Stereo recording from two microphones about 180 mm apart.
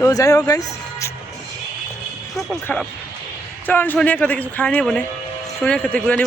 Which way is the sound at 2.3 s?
5° left (ahead or behind).